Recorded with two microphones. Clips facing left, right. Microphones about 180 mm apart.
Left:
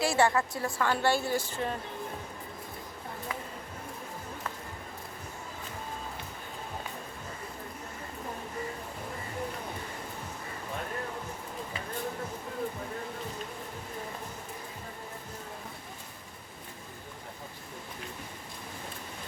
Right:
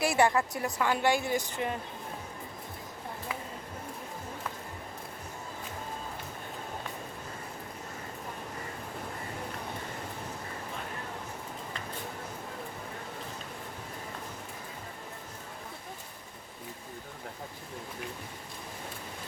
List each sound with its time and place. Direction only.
0.0 s speech: 20° right (ahead or behind)